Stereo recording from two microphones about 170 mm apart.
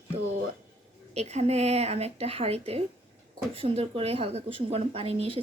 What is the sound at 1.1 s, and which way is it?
A woman's voice, 40° right (ahead or behind).